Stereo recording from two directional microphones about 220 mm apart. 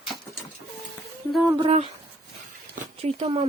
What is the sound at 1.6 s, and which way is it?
Speech, 25° right (ahead or behind).